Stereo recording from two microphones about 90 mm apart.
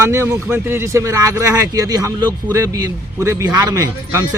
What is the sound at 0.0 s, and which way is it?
A man's voice, 30° right (ahead or behind).